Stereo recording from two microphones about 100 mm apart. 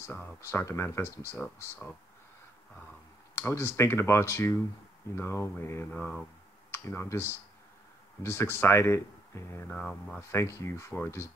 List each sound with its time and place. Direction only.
0.0 s speech: 20° left (ahead or behind)
3.3 s speech: 25° left (ahead or behind)
5.9 s speech: 15° left (ahead or behind)
6.7 s speech: 25° left (ahead or behind)
9.7 s speech: 10° left (ahead or behind)
10.3 s speech: 30° left (ahead or behind)